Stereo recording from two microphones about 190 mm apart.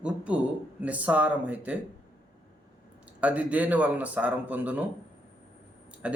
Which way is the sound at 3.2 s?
5° right (ahead or behind).